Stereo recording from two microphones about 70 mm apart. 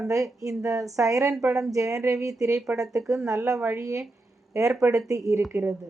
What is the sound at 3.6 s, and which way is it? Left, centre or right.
Speech, right.